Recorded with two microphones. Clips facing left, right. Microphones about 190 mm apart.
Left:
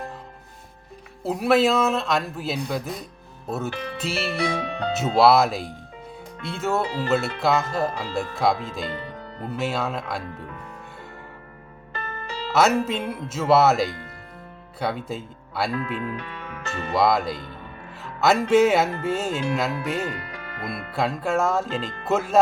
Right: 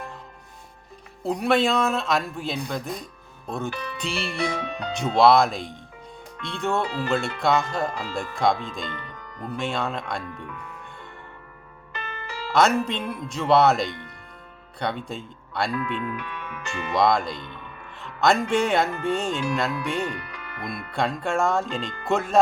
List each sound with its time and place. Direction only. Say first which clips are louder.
1.2 s music: left 2 dB; 5° left (ahead or behind)
4.4 s speech: left 2 dB; 30° left (ahead or behind)
5.1 s music: even; 5° left (ahead or behind)
8.9 s music: left 5 dB; 30° left (ahead or behind)
9.6 s music: left 1 dB; 5° left (ahead or behind)
10.3 s speech: left 1 dB; 40° left (ahead or behind)
12.5 s music: left 1 dB; 5° left (ahead or behind)
15.7 s speech: even; 35° left (ahead or behind)
16.9 s music: left 1 dB; 5° left (ahead or behind)
20.1 s speech: left 1 dB; 40° left (ahead or behind)
20.9 s music: left 1 dB; 5° left (ahead or behind)